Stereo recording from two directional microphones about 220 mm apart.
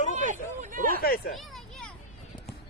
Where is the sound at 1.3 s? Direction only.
Centre (ahead or behind).